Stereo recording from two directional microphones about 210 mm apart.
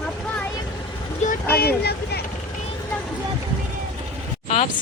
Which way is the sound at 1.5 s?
50° left (ahead or behind).